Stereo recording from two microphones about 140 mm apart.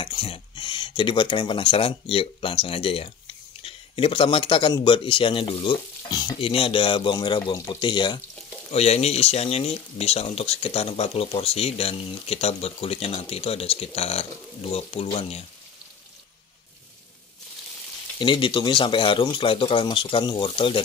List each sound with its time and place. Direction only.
0.0 s speech: 40° left (ahead or behind)
6.3 s speech: 40° left (ahead or behind)
8.7 s speech: 50° left (ahead or behind)
18.2 s speech: 35° left (ahead or behind)